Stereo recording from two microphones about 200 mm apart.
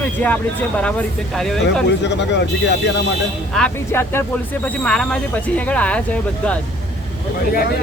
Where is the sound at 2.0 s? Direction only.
60° left (ahead or behind).